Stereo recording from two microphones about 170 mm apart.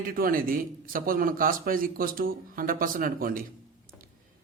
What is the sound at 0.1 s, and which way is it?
Speech, 60° right (ahead or behind).